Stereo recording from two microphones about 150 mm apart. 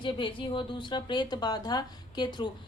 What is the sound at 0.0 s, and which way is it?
Speech, 35° left (ahead or behind).